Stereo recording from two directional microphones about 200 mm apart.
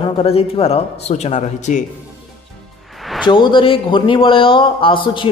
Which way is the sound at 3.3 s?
25° left (ahead or behind).